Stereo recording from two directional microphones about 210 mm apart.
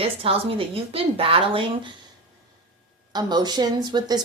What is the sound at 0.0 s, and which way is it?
Speech, 25° right (ahead or behind).